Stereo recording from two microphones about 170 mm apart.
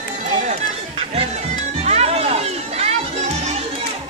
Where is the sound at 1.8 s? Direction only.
40° right (ahead or behind).